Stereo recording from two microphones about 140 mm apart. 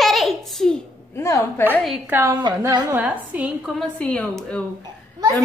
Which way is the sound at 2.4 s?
30° right (ahead or behind).